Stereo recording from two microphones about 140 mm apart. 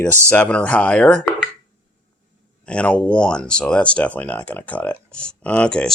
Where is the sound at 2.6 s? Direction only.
10° left (ahead or behind).